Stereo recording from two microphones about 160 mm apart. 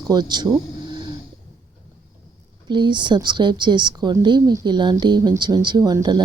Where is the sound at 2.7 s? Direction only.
30° right (ahead or behind).